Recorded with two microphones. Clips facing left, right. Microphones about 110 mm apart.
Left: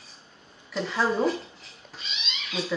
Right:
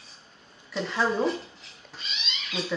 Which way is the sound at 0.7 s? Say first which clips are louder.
Left 1 dB; centre (ahead or behind).